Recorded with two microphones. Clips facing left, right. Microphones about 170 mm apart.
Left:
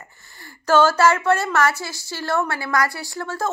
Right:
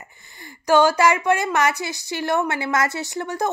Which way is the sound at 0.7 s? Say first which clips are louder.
Even; 15° right (ahead or behind).